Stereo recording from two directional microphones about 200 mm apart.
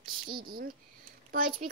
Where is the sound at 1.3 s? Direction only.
45° right (ahead or behind).